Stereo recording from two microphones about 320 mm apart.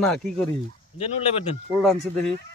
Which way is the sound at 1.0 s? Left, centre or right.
Centre.